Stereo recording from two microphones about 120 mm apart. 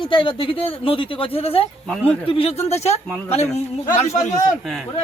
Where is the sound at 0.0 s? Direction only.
45° left (ahead or behind); by 3.0 s 65° left (ahead or behind).